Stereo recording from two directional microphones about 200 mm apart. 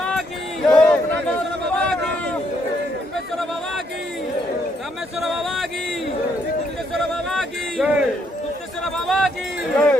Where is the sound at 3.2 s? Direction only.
Centre (ahead or behind).